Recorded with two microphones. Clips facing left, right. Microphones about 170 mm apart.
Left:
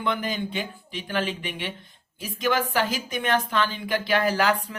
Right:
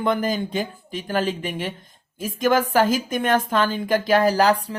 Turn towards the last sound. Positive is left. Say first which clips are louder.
# right 5 dB
turn(degrees=-35)  # may be behind; listen again after turning